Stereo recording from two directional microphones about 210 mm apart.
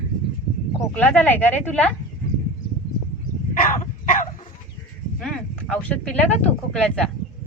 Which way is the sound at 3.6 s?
40° left (ahead or behind).